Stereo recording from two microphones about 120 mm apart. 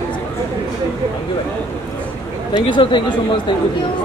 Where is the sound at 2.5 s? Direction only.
40° left (ahead or behind).